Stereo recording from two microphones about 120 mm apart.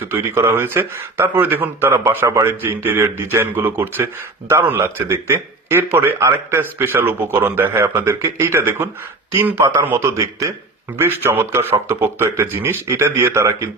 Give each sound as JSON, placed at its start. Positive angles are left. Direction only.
{"t": 0.0, "sound": "speech", "side_deg": -20}